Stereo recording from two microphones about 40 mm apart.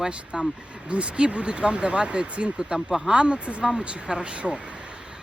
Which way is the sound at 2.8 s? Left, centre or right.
Centre.